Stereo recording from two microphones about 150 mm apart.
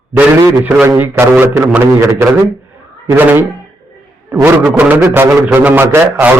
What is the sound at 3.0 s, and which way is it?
A man's voice, 15° right (ahead or behind).